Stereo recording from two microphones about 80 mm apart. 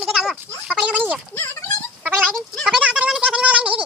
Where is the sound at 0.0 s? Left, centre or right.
Centre.